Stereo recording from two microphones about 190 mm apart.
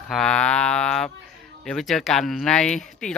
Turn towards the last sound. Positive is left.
turn(degrees=5)  # may be behind; listen again after turning